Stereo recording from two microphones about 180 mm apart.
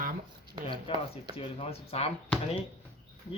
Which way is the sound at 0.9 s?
30° left (ahead or behind).